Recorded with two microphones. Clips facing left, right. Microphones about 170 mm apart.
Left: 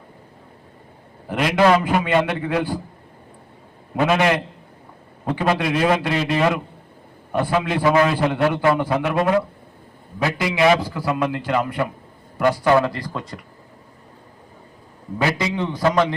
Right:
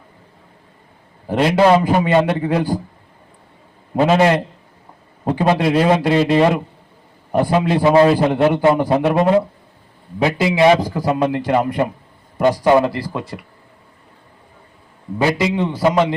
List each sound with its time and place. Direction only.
1.3 s a man's voice: 30° right (ahead or behind)
3.9 s a man's voice: 30° right (ahead or behind)
8.8 s a man's voice: 35° right (ahead or behind)
10.8 s a man's voice: 40° right (ahead or behind)
11.1 s a man's voice: 25° right (ahead or behind)
15.2 s a man's voice: 20° right (ahead or behind)